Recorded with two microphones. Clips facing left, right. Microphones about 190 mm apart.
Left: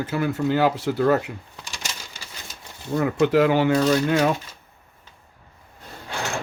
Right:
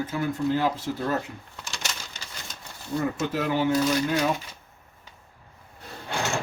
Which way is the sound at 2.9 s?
70° left (ahead or behind).